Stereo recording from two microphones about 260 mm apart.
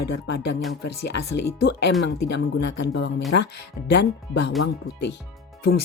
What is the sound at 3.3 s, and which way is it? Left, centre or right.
Speech, left.